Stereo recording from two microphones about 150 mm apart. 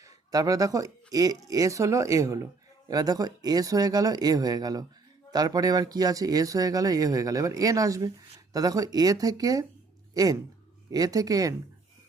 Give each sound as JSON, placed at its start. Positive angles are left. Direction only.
{"t": 0.0, "sound": "speech", "side_deg": -25}